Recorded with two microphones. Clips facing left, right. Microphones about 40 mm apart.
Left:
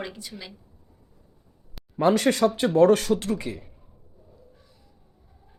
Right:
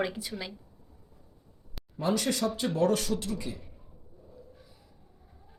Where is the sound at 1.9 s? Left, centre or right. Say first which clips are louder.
Left 8 dB; left.